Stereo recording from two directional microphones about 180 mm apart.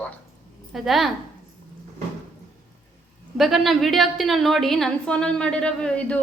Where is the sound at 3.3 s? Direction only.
Centre (ahead or behind).